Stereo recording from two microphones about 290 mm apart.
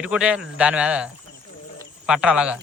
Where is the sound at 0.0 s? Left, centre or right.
Centre.